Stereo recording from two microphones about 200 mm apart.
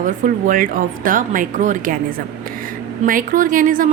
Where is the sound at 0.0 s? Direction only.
45° right (ahead or behind).